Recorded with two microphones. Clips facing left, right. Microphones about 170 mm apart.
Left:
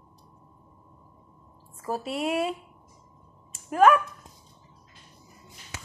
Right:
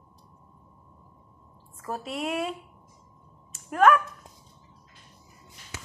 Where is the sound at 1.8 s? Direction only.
5° left (ahead or behind).